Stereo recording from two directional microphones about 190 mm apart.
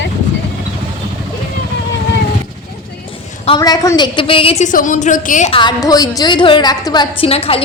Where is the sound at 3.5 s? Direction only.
20° left (ahead or behind); by 5.5 s 40° left (ahead or behind).